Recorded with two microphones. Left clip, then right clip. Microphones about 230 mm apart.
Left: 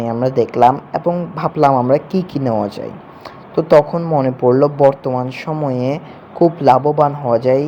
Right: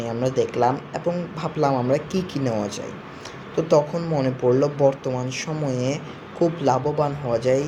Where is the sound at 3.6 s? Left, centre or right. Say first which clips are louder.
Left 8 dB; left.